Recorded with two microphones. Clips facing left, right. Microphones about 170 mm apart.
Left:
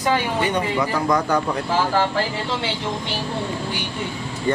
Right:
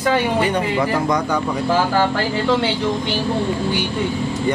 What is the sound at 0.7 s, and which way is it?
Speech, 20° right (ahead or behind).